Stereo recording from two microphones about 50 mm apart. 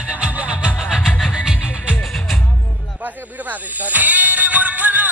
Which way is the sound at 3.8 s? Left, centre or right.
Right.